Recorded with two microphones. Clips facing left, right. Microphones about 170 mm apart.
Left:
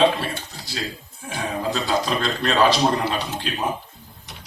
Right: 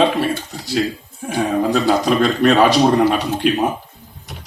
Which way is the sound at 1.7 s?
55° right (ahead or behind).